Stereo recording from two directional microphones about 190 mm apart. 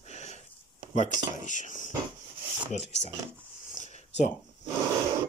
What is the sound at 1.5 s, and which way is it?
Speech, 40° left (ahead or behind).